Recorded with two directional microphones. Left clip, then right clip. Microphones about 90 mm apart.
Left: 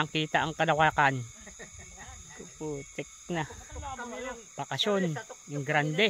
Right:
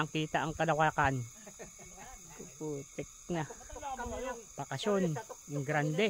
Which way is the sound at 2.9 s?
35° left (ahead or behind).